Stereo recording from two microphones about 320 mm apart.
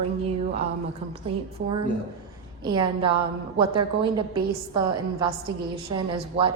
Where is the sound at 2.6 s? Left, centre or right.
Centre.